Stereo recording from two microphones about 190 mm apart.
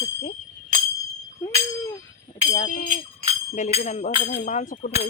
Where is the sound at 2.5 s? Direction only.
45° left (ahead or behind).